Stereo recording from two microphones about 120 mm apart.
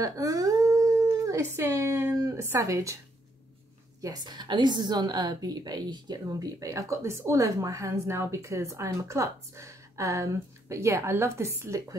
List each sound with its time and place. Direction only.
0.0 s howl: 30° right (ahead or behind)
1.2 s a woman's voice: 25° right (ahead or behind)
4.0 s a woman's voice: 35° right (ahead or behind)